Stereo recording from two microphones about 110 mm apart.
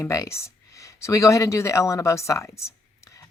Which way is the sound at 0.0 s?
25° left (ahead or behind).